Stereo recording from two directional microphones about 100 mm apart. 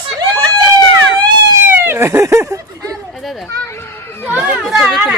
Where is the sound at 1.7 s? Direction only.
25° right (ahead or behind).